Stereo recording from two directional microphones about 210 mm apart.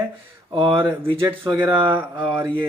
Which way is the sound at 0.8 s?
10° right (ahead or behind).